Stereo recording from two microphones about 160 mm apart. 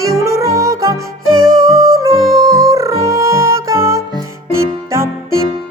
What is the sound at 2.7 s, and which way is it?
Music, 20° right (ahead or behind).